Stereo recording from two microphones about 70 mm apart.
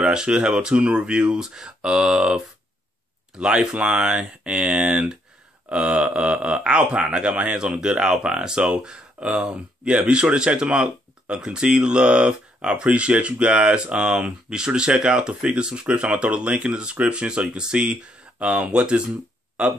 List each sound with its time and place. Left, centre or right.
0.0 s speech: centre